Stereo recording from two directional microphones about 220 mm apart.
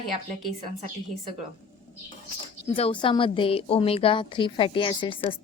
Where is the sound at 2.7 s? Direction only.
25° left (ahead or behind).